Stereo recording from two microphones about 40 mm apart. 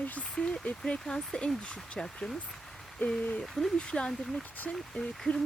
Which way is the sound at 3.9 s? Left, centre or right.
Left.